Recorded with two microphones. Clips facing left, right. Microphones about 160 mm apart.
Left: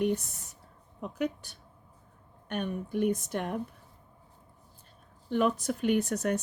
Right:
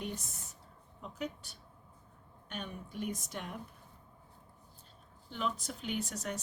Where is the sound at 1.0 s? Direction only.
70° left (ahead or behind).